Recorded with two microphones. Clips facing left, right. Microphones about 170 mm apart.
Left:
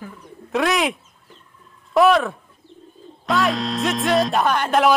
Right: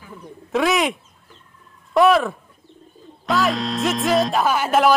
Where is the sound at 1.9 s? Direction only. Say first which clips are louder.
Even; centre (ahead or behind).